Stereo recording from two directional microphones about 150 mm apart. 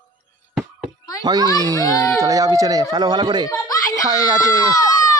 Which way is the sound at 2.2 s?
25° right (ahead or behind).